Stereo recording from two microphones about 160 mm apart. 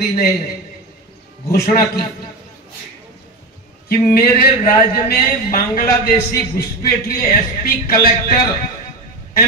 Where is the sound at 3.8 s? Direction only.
70° left (ahead or behind).